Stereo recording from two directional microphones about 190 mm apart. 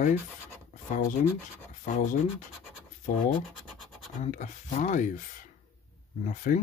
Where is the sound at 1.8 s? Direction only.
40° left (ahead or behind).